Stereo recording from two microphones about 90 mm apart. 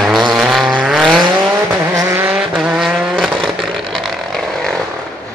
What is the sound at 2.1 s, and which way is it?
Vehicle, 20° right (ahead or behind).